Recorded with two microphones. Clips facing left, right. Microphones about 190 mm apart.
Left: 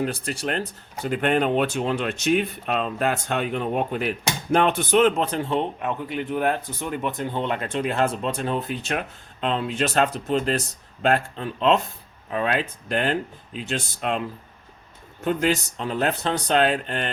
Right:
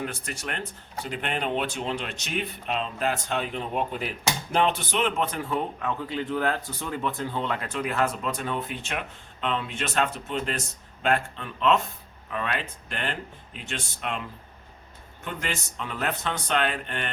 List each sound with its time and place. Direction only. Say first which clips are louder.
0.0 s speech: left 7 dB; 35° left (ahead or behind)
1.1 s a man's voice: left 8 dB; 45° left (ahead or behind)
15.2 s speech: left 11 dB; 35° left (ahead or behind)